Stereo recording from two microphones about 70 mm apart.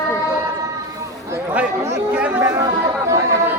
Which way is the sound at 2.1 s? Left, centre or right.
Right.